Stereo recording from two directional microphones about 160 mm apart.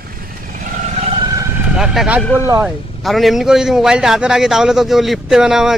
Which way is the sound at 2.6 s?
Centre (ahead or behind).